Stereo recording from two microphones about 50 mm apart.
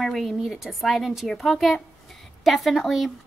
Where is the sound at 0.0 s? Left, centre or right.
Centre.